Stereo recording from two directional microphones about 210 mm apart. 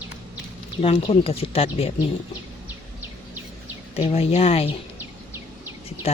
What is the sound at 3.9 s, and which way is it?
Speech, 30° left (ahead or behind).